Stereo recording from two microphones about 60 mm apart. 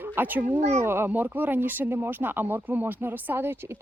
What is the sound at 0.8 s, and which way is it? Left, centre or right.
Speech, right.